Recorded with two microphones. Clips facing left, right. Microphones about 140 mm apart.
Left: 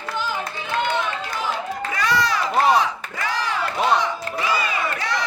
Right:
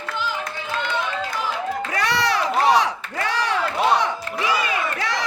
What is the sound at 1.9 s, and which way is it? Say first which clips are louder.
Crowd: left 1 dB; 75° right (ahead or behind).